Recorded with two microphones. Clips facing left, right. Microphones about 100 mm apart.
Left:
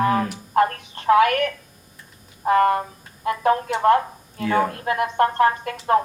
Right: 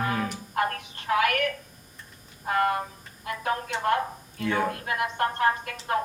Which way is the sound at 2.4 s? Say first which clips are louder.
Left 8 dB; 40° left (ahead or behind).